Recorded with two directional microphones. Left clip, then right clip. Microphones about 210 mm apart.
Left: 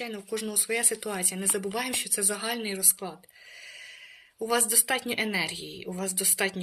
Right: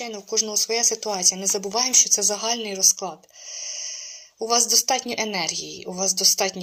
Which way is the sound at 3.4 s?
60° left (ahead or behind).